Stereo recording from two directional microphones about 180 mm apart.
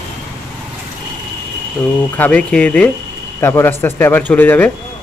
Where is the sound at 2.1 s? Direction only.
10° left (ahead or behind).